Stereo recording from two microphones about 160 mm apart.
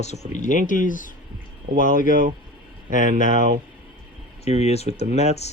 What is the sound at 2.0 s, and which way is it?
Speech, 60° right (ahead or behind).